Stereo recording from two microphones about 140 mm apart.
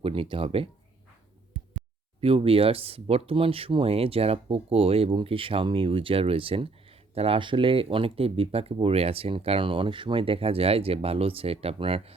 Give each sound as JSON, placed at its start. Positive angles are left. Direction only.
{"t": 0.0, "sound": "speech", "side_deg": -40}
{"t": 1.5, "sound": "heart sounds", "side_deg": -70}
{"t": 2.2, "sound": "speech", "side_deg": -40}